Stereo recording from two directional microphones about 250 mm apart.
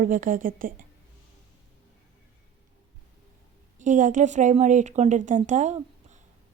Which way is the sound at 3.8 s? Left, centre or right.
Right.